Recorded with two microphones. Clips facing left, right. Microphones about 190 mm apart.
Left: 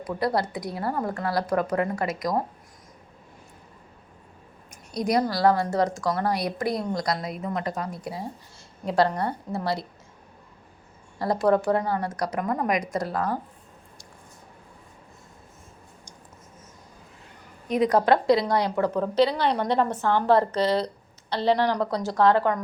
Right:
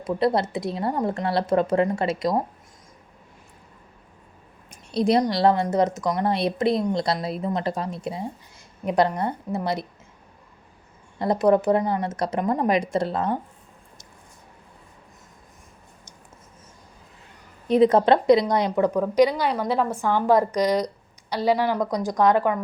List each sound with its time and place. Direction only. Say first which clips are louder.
0.0 s a woman's voice: right 4 dB; 25° right (ahead or behind)
4.9 s a woman's voice: right 4 dB; 30° right (ahead or behind)
11.2 s a woman's voice: right 3 dB; 20° right (ahead or behind)
17.7 s a woman's voice: right 4 dB; 25° right (ahead or behind); by 22.6 s 10° right (ahead or behind)